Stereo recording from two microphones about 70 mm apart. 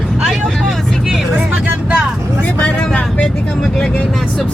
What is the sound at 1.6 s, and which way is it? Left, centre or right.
Vehicle, centre.